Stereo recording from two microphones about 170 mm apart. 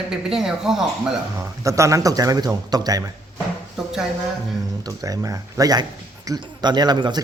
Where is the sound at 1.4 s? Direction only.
20° right (ahead or behind).